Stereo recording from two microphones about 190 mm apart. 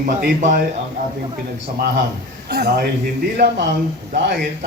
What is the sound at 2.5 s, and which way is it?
Speech, 55° right (ahead or behind).